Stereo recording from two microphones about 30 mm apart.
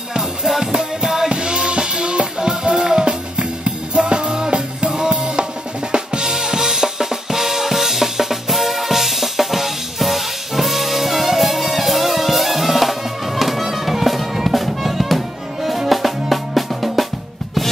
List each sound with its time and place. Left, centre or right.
0.5 s music: centre
1.3 s music: right; by 17.0 s centre